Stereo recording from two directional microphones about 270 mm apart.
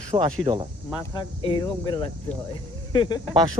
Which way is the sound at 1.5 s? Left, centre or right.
Centre.